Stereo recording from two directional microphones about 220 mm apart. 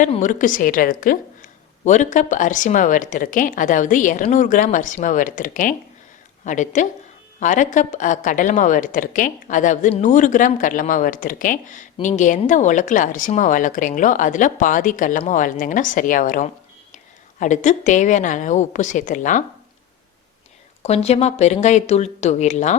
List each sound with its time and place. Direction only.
0.0 s a woman's voice: 35° left (ahead or behind)
20.8 s a woman's voice: 30° left (ahead or behind)